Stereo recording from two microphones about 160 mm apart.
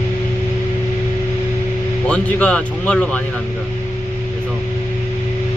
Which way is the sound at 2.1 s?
5° left (ahead or behind).